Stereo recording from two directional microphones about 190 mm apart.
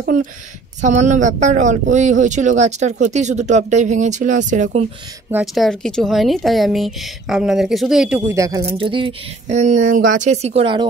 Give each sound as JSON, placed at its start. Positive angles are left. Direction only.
{"t": 0.0, "sound": "speech", "side_deg": -45}
{"t": 5.3, "sound": "speech", "side_deg": 0}
{"t": 8.6, "sound": "speech", "side_deg": -30}